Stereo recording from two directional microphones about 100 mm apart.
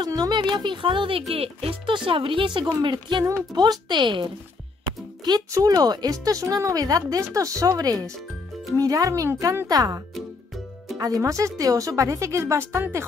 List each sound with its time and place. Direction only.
0.0 s speech: 40° right (ahead or behind); by 1.2 s 60° right (ahead or behind)
1.3 s speech: 70° right (ahead or behind)
2.0 s speech: 60° right (ahead or behind)
5.2 s a woman's voice: 40° right (ahead or behind)
10.1 s music: centre (ahead or behind)
11.0 s a woman's voice: 35° right (ahead or behind)